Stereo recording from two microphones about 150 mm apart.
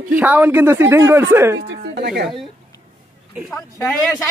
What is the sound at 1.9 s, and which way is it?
Speech, 90° right.